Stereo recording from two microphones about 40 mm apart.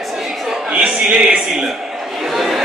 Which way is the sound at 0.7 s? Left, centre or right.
Right.